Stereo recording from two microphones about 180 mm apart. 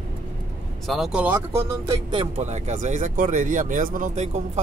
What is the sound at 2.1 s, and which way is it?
Speech, 35° right (ahead or behind).